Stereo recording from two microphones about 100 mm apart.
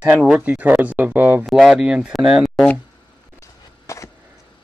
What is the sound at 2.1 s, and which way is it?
Speech, centre (ahead or behind).